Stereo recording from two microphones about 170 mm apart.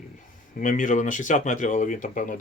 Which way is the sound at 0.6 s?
50° left (ahead or behind).